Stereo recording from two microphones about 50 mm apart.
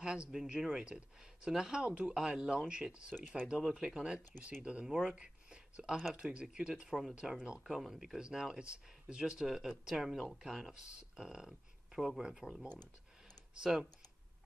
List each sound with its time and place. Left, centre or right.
0.0 s speech: centre
1.9 s speech: right
2.1 s speech: centre
4.8 s speech: centre
5.1 s a sound: centre
6.3 s speech: centre
6.9 s speech: centre
13.6 s speech: centre